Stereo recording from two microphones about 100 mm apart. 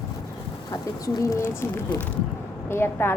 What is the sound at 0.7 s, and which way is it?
Speech, 35° left (ahead or behind).